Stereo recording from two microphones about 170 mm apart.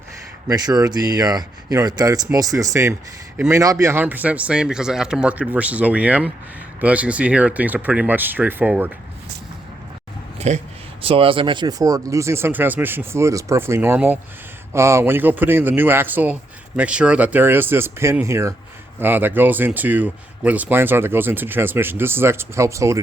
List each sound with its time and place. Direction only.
0.4 s speech: 20° right (ahead or behind)
10.3 s a sound: 40° right (ahead or behind)
11.0 s speech: 35° right (ahead or behind); by 23.0 s 15° right (ahead or behind)